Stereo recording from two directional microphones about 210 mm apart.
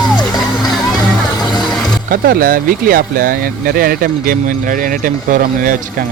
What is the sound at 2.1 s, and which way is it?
Speech, 45° right (ahead or behind).